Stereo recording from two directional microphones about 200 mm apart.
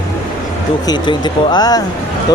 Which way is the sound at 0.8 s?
20° left (ahead or behind).